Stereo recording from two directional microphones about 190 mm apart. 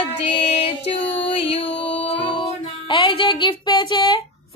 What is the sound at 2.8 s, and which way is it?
Female singing, 25° left (ahead or behind).